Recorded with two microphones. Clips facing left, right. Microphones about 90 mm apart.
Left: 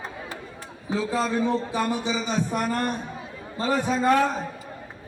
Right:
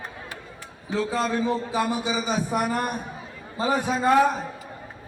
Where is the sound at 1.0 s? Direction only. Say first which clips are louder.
Even; centre (ahead or behind).